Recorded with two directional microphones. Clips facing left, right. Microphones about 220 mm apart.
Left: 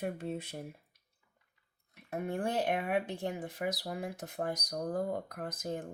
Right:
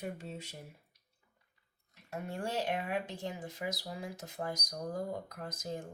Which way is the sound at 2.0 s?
55° left (ahead or behind).